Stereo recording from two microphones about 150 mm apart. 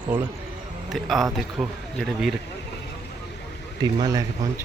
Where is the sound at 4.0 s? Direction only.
25° right (ahead or behind).